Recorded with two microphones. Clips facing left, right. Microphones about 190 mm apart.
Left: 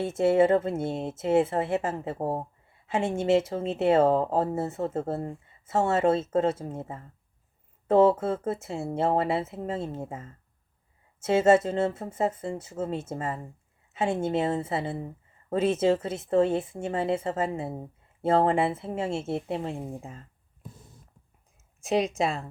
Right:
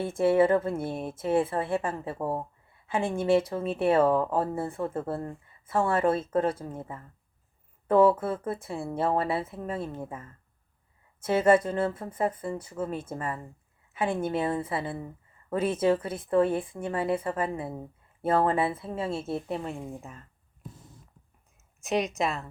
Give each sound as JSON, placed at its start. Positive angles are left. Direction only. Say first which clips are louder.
{"t": 0.0, "sound": "speech", "louder": "left 1 dB", "side_deg": 25}
{"t": 21.8, "sound": "speech", "louder": "left 2 dB", "side_deg": 30}